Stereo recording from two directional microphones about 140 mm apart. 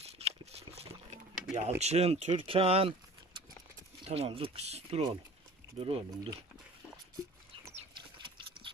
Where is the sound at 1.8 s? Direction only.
50° right (ahead or behind).